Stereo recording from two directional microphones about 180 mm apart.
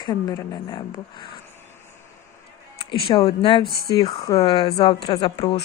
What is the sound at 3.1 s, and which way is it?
A woman's voice, 30° left (ahead or behind).